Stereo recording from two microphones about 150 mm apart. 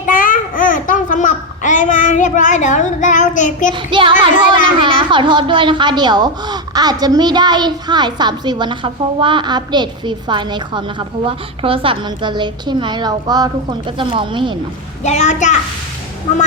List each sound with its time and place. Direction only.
0.0 s babbling: 65° left (ahead or behind)
3.8 s speech: 35° right (ahead or behind)
15.0 s a child's voice: 50° left (ahead or behind)